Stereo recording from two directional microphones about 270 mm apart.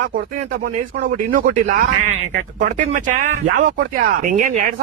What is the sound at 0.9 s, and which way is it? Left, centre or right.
Speech, right.